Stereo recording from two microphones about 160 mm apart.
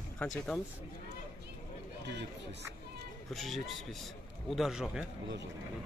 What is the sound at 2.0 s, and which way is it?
Speech, 90° right.